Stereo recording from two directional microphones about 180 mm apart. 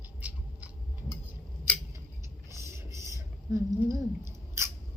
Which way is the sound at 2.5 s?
15° right (ahead or behind).